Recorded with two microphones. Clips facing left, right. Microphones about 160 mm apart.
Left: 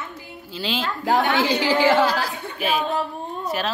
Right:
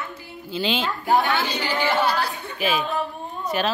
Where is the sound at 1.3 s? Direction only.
90° left.